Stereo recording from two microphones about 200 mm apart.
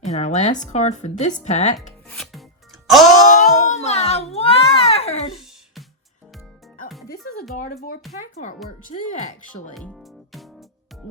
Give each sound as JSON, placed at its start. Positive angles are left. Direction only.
{"t": 0.0, "sound": "speech", "side_deg": 35}
{"t": 2.0, "sound": "rub", "side_deg": 0}
{"t": 2.8, "sound": "music", "side_deg": 0}
{"t": 3.4, "sound": "baby cry", "side_deg": 35}
{"t": 5.3, "sound": "music", "side_deg": 0}
{"t": 8.2, "sound": "speech", "side_deg": 40}
{"t": 9.7, "sound": "speech", "side_deg": 0}